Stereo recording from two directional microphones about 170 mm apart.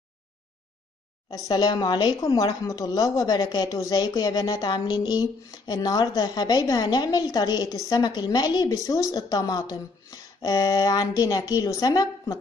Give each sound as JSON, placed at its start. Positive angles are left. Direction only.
{"t": 1.3, "sound": "a woman's voice", "side_deg": 25}